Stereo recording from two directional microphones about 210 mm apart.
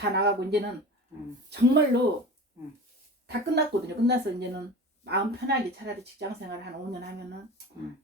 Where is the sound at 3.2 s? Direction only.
55° right (ahead or behind).